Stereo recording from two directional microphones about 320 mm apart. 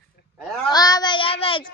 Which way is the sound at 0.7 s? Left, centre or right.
Centre.